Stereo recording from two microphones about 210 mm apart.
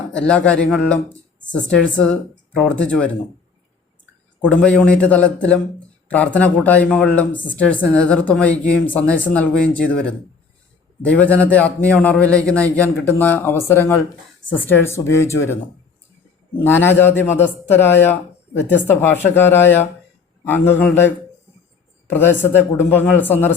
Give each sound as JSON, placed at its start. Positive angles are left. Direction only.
{"t": 0.1, "sound": "speech", "side_deg": 5}
{"t": 4.4, "sound": "speech", "side_deg": 5}
{"t": 16.6, "sound": "speech", "side_deg": 10}
{"t": 22.1, "sound": "speech", "side_deg": 10}